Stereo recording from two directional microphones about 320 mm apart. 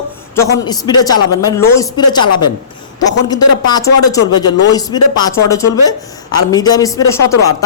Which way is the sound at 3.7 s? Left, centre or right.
Centre.